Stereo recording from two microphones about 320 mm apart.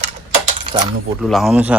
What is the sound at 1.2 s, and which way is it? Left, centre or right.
Speech, centre.